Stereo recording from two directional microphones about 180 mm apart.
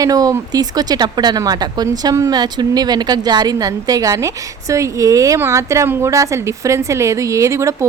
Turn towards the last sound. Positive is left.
turn(degrees=-15)  # may be behind; listen again after turning